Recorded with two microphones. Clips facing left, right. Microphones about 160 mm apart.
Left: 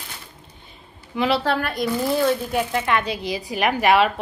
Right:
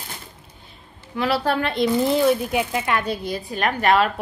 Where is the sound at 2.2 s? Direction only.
10° right (ahead or behind).